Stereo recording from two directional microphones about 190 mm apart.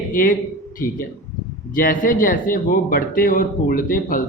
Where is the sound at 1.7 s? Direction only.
45° left (ahead or behind).